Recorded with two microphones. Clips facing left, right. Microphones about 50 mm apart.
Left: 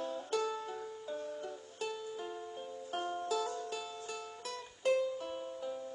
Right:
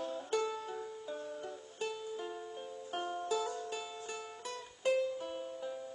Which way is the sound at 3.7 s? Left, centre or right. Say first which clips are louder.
Even; centre.